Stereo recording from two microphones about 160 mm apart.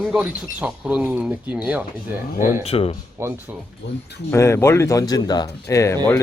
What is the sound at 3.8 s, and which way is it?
Speech, 90° left.